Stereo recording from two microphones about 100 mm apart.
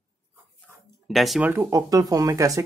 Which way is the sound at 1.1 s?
Centre (ahead or behind).